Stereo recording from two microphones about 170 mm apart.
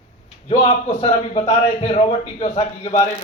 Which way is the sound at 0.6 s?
35° left (ahead or behind).